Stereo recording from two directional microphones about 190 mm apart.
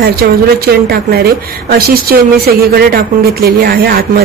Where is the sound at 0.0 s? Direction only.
55° right (ahead or behind).